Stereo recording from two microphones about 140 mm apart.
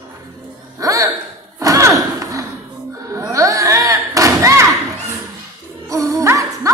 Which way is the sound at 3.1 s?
20° right (ahead or behind).